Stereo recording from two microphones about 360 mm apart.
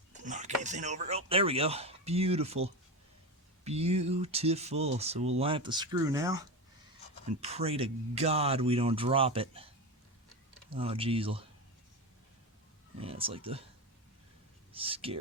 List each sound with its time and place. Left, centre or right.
0.3 s speech: centre
10.8 s speech: centre
13.0 s speech: centre
14.7 s speech: centre